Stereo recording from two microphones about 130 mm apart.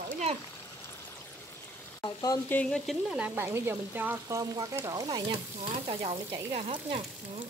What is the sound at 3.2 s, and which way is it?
Frying, 15° right (ahead or behind).